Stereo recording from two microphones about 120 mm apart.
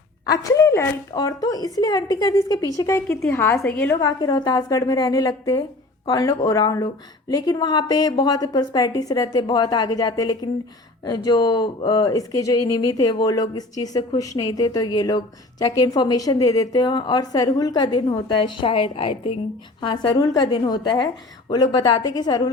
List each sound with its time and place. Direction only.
0.4 s a woman's voice: 25° left (ahead or behind)
4.0 s a woman's voice: 35° left (ahead or behind)
19.9 s speech: 40° left (ahead or behind)